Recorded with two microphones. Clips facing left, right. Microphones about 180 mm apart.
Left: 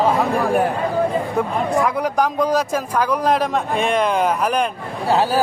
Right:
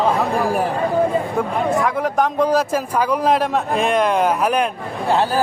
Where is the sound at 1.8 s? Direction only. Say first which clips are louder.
Even; centre (ahead or behind).